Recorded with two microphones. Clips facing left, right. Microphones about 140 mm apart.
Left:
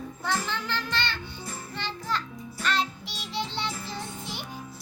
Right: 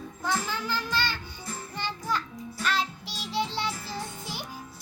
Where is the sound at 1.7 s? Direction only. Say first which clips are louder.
Right 1 dB; 10° right (ahead or behind).